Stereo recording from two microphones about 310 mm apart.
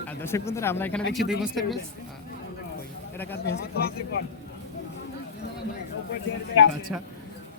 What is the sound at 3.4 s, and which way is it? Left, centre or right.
Speech, left.